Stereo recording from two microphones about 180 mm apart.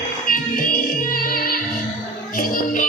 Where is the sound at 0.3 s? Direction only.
50° left (ahead or behind).